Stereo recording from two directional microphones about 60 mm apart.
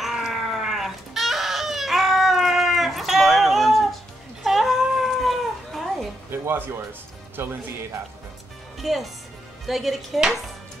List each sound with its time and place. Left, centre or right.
0.0 s crying: centre
6.4 s music: right
7.4 s speech: right
8.7 s speech: centre